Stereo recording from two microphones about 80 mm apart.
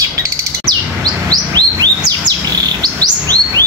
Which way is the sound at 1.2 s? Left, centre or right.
Right.